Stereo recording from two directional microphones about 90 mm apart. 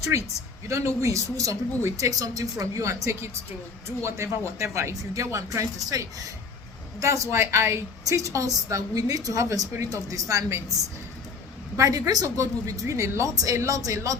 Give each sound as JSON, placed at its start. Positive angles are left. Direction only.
{"t": 0.1, "sound": "a woman's voice", "side_deg": -35}
{"t": 11.8, "sound": "a woman's voice", "side_deg": -40}